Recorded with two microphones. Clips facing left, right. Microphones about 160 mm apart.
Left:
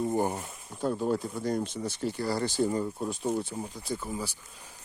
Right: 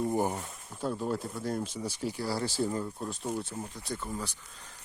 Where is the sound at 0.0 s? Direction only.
20° left (ahead or behind).